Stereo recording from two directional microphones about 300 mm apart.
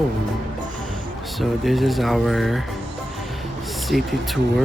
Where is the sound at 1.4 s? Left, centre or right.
Centre.